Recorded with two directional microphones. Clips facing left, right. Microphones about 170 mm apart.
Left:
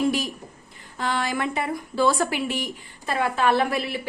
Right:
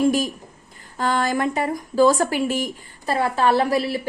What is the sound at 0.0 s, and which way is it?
A woman's voice, 45° right (ahead or behind).